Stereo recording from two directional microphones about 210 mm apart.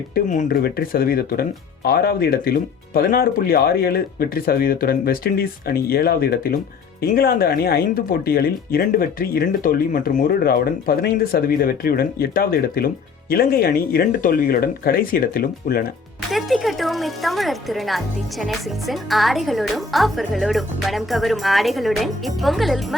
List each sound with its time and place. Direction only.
0.1 s speech: 35° left (ahead or behind)
16.3 s speech: centre (ahead or behind)